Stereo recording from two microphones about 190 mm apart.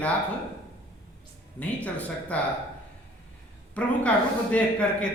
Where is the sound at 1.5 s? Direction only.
10° left (ahead or behind).